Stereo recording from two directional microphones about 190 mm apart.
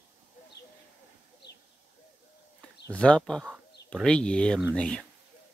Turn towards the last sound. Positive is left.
turn(degrees=5)  # may be behind; listen again after turning